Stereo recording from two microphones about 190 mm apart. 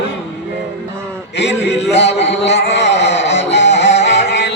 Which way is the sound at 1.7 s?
35° left (ahead or behind).